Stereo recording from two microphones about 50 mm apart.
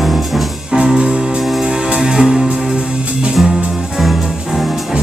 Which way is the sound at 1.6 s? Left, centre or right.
Centre.